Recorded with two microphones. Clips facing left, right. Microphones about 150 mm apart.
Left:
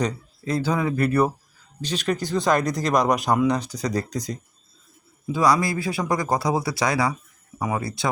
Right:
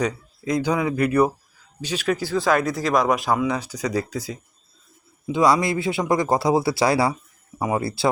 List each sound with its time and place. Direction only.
0.0 s speech: 15° right (ahead or behind)
5.2 s speech: 20° right (ahead or behind)